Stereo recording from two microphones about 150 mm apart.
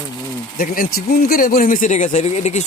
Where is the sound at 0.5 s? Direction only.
70° left (ahead or behind).